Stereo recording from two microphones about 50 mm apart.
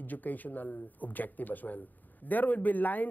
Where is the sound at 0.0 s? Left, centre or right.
Left.